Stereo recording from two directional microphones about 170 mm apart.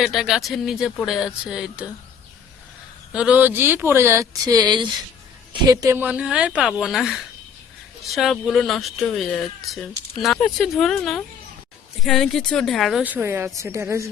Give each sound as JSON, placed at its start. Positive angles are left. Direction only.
{"t": 0.0, "sound": "speech", "side_deg": 0}
{"t": 3.1, "sound": "speech", "side_deg": -5}
{"t": 10.3, "sound": "speech", "side_deg": 5}